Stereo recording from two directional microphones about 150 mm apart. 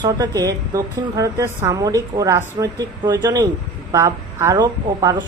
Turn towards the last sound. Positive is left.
turn(degrees=-25)  # may be behind; listen again after turning